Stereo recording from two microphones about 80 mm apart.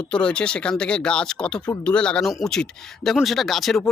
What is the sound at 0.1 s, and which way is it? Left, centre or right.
A man's voice, centre.